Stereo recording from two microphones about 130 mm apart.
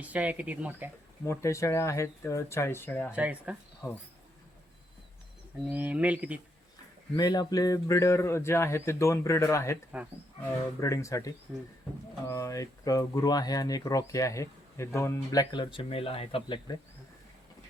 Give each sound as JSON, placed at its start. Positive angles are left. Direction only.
{"t": 0.0, "sound": "speech", "side_deg": -10}
{"t": 1.2, "sound": "speech", "side_deg": 25}
{"t": 3.1, "sound": "speech", "side_deg": -10}
{"t": 3.8, "sound": "speech", "side_deg": 20}
{"t": 5.7, "sound": "speech", "side_deg": -10}
{"t": 7.2, "sound": "speech", "side_deg": 30}
{"t": 9.9, "sound": "speech", "side_deg": -10}
{"t": 10.8, "sound": "speech", "side_deg": 25}